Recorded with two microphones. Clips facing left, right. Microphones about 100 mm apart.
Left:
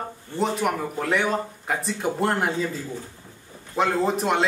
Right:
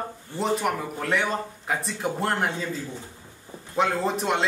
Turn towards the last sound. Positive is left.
turn(degrees=0)  # may be behind; listen again after turning